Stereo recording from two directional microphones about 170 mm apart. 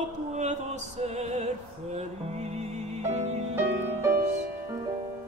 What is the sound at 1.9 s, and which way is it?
Music, 40° right (ahead or behind).